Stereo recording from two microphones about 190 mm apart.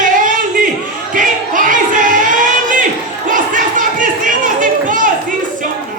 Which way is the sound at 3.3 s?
45° right (ahead or behind).